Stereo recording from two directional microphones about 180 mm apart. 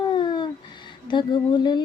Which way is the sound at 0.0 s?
25° left (ahead or behind).